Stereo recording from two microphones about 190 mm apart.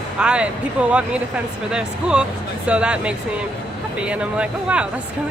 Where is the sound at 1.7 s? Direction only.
5° right (ahead or behind).